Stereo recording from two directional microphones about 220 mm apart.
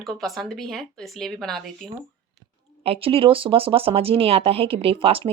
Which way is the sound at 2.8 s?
25° right (ahead or behind).